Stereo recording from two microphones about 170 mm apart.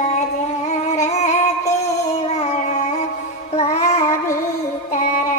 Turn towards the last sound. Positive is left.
turn(degrees=40)  # may be behind; listen again after turning